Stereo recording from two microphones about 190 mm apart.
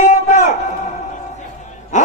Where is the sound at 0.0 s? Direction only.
40° left (ahead or behind).